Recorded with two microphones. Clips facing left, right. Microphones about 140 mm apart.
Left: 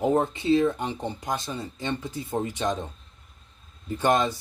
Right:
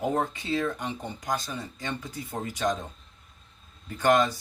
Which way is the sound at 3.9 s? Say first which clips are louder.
Even; 20° left (ahead or behind).